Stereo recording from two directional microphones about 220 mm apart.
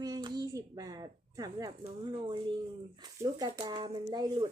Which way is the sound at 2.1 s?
25° right (ahead or behind).